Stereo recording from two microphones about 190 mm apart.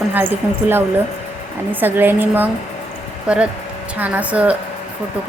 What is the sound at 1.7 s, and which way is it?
A woman's voice, 10° right (ahead or behind).